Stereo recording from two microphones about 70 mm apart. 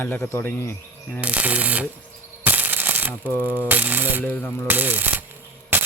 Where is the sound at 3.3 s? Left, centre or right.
Left.